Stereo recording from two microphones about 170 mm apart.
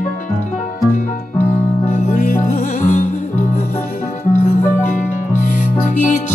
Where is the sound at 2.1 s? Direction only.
50° left (ahead or behind).